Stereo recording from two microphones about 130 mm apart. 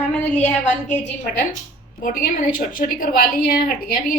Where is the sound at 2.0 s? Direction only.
90° left.